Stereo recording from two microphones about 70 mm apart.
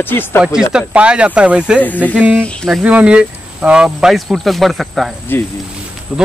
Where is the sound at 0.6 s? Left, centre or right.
Centre.